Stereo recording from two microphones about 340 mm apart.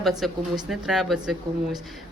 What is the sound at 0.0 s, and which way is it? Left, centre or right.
Speech, centre.